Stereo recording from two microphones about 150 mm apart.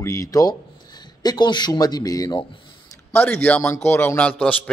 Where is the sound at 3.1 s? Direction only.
10° left (ahead or behind).